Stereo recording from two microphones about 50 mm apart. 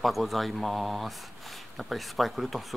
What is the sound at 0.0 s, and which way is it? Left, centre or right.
Speech, centre.